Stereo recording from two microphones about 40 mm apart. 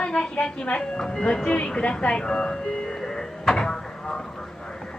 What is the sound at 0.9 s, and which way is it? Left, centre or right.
Speech, centre.